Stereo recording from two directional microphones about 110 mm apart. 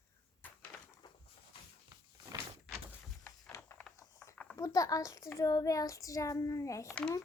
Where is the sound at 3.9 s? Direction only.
25° left (ahead or behind).